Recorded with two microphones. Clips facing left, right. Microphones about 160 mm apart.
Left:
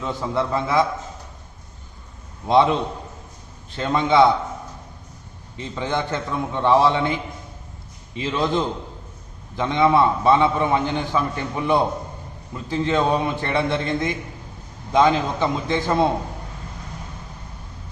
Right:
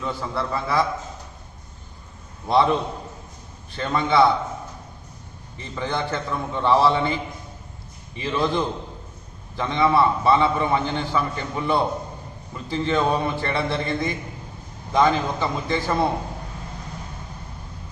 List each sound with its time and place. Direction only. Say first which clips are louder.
0.0 s a man's voice: left 3 dB; 20° left (ahead or behind)
2.5 s a man's voice: left 2 dB; 15° left (ahead or behind)
3.8 s a man's voice: left 2 dB; 15° left (ahead or behind)
5.5 s a man's voice: left 2 dB; 15° left (ahead or behind)